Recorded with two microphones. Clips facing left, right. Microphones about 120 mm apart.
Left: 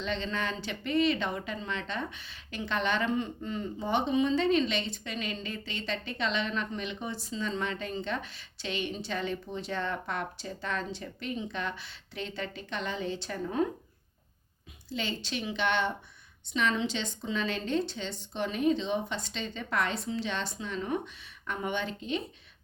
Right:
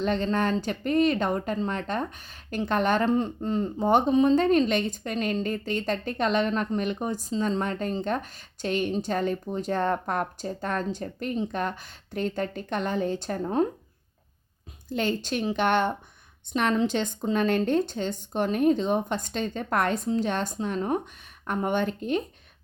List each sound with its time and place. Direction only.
0.0 s speech: 50° right (ahead or behind)
14.8 s speech: 50° right (ahead or behind)